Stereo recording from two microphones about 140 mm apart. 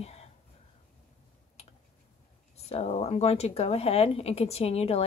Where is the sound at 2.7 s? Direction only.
50° left (ahead or behind).